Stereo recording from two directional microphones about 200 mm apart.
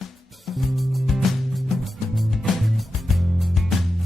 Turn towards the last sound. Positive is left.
turn(degrees=0)  # may be behind; listen again after turning